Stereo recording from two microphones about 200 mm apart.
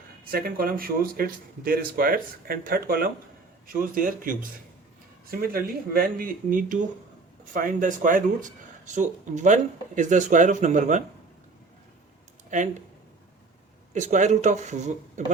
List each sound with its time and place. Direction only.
0.3 s speech: 50° right (ahead or behind)
12.5 s speech: 40° right (ahead or behind)
13.9 s speech: 35° right (ahead or behind)